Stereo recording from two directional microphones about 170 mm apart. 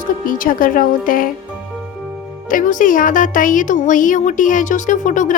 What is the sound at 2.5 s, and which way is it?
Speech, 50° left (ahead or behind).